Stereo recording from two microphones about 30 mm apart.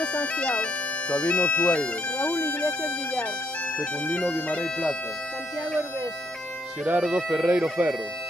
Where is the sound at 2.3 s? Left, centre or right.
Left.